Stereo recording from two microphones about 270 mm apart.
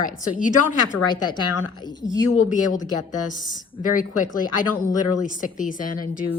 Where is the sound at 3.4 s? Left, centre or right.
Left.